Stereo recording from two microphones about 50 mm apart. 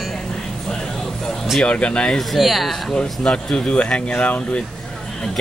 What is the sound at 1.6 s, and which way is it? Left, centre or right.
Speech, left.